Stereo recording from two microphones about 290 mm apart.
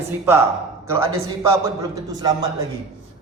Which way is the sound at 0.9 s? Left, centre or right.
Centre.